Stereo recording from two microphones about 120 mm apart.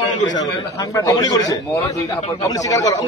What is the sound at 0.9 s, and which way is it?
A man's voice, 30° left (ahead or behind).